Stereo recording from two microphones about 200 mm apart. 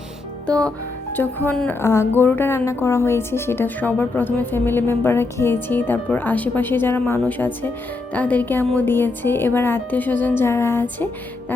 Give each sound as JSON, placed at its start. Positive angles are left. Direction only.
{"t": 0.4, "sound": "speech", "side_deg": 5}